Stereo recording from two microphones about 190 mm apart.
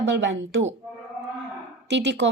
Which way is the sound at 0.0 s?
65° right (ahead or behind).